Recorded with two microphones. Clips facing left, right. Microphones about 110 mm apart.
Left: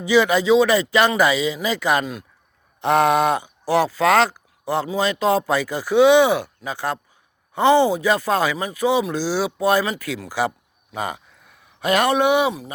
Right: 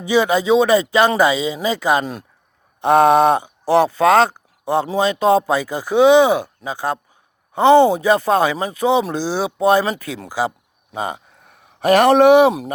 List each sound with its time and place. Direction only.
0.1 s speech: 20° right (ahead or behind)
11.4 s speech: 50° right (ahead or behind)